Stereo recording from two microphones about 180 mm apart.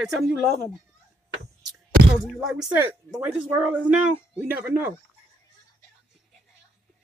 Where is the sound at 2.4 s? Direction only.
5° right (ahead or behind).